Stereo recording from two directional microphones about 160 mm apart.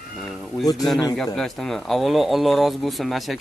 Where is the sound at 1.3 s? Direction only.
Centre (ahead or behind).